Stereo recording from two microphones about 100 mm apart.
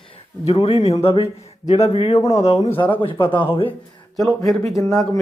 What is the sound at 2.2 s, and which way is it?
Speech, 90° left.